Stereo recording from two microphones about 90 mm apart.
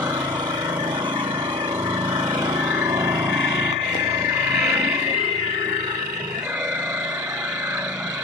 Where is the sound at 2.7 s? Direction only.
30° right (ahead or behind).